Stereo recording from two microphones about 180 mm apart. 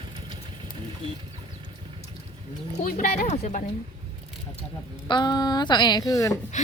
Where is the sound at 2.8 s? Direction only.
50° left (ahead or behind).